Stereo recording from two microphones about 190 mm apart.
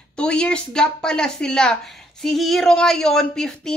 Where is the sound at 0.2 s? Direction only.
5° left (ahead or behind).